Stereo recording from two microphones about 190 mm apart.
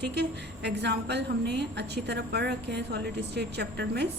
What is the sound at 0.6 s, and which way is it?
A woman's voice, 65° right (ahead or behind).